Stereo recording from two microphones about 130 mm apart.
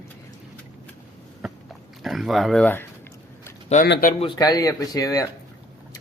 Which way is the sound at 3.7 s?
75° left (ahead or behind).